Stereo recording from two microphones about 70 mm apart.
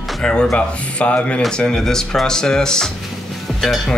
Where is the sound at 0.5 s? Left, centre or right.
Centre.